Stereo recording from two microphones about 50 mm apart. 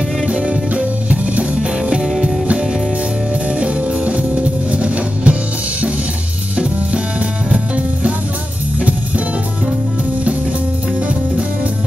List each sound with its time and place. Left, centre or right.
0.3 s music: right
3.5 s music: right
7.4 s music: right